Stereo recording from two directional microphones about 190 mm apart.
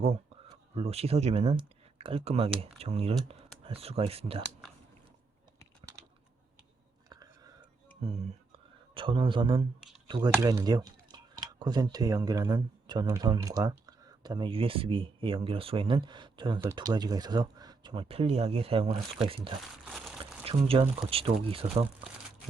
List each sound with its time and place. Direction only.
0.8 s speech: 30° right (ahead or behind)
8.5 s whispering: 25° right (ahead or behind)
10.1 s speech: 20° right (ahead or behind)
19.8 s a sound: centre (ahead or behind)
20.4 s speech: 30° right (ahead or behind)